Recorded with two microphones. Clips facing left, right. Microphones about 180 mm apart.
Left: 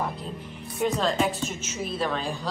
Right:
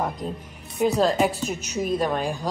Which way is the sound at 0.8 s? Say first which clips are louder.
Right 4 dB; 40° right (ahead or behind).